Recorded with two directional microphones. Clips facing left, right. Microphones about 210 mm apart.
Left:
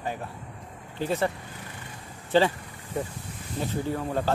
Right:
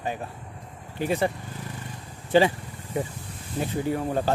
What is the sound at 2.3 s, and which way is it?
Speech, 15° right (ahead or behind).